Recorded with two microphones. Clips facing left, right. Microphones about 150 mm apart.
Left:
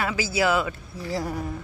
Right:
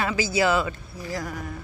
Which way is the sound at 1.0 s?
30° left (ahead or behind).